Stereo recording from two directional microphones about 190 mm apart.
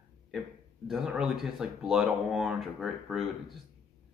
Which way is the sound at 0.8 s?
Centre (ahead or behind).